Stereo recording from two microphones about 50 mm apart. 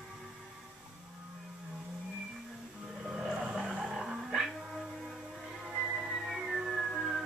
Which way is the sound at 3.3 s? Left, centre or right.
Centre.